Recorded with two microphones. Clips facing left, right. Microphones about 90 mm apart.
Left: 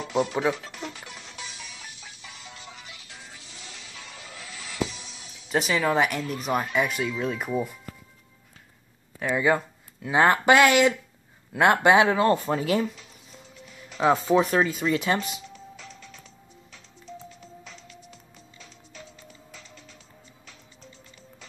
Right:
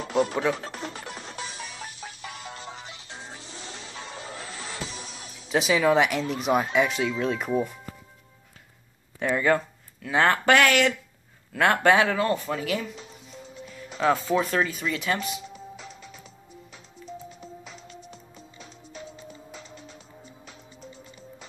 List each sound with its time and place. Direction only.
0.0 s music: 45° right (ahead or behind)
5.5 s speech: centre (ahead or behind)
9.2 s speech: 5° left (ahead or behind); by 12.8 s 30° left (ahead or behind)
13.9 s speech: 20° left (ahead or behind)
15.4 s music: 15° right (ahead or behind)
17.3 s music: 15° right (ahead or behind)